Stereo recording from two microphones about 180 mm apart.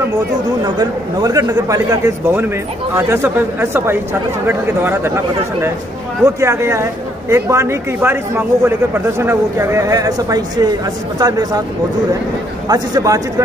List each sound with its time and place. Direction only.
0.7 s a man's voice: 20° right (ahead or behind)
12.6 s a man's voice: 20° right (ahead or behind)